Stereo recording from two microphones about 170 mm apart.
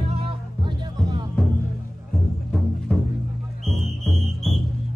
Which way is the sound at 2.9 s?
5° left (ahead or behind).